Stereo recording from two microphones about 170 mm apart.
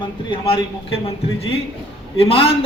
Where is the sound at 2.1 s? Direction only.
35° left (ahead or behind).